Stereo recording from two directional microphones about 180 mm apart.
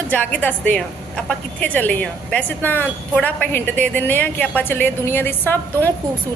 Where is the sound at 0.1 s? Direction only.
10° left (ahead or behind).